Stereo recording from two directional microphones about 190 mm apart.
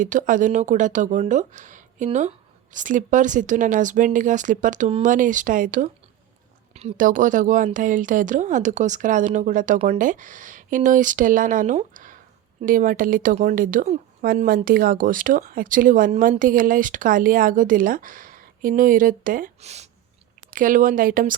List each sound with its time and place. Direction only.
0.0 s speech: 40° right (ahead or behind)
20.5 s speech: 45° right (ahead or behind)